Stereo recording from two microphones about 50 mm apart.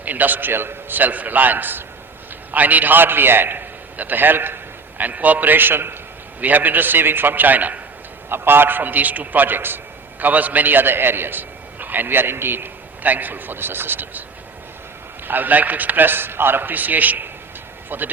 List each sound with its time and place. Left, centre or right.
0.0 s a man's voice: right
8.3 s a man's voice: right
15.3 s a man's voice: right